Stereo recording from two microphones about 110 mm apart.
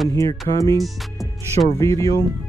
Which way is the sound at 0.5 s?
30° left (ahead or behind).